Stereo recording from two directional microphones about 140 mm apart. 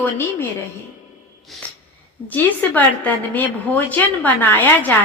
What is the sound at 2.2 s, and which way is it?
A woman's voice, 10° left (ahead or behind).